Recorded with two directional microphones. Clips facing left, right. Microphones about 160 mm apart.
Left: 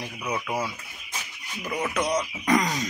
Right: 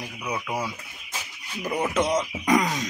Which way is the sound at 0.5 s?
5° left (ahead or behind).